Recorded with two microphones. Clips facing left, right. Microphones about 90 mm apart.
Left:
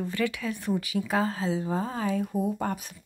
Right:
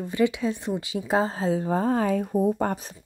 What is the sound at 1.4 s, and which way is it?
Speech, 45° right (ahead or behind).